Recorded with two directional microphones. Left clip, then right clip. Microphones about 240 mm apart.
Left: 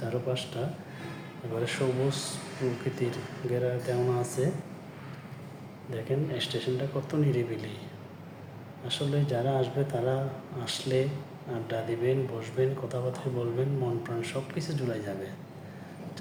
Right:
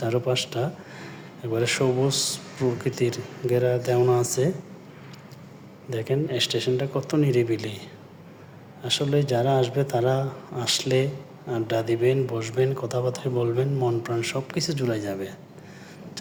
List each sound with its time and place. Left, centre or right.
0.0 s speech: right
5.9 s speech: right
8.8 s speech: right